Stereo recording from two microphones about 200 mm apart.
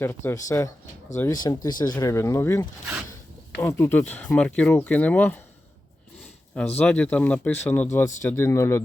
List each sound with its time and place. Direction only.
0.3 s speech: 15° left (ahead or behind)
6.7 s speech: 5° left (ahead or behind)